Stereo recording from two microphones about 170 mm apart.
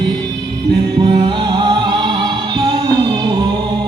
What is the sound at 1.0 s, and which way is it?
Music, 30° right (ahead or behind).